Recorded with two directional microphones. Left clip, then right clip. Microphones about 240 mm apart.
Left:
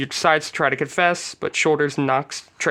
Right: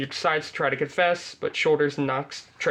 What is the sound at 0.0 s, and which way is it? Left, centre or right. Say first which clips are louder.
Speech: left 6 dB; left.